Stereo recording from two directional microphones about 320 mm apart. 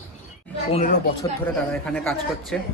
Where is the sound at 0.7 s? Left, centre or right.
Left.